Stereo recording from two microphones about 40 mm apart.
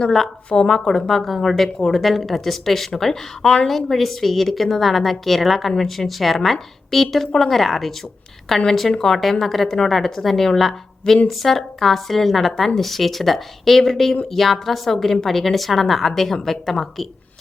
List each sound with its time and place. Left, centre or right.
0.7 s a woman's voice: centre
3.4 s a woman's voice: left
3.7 s a woman's voice: centre